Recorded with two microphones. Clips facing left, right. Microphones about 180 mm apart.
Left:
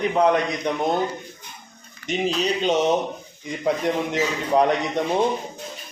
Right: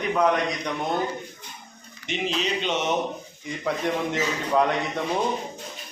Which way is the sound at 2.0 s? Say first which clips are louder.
Left 4 dB; 40° left (ahead or behind).